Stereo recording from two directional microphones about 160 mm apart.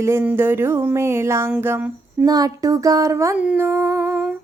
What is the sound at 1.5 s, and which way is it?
Female singing, 10° right (ahead or behind).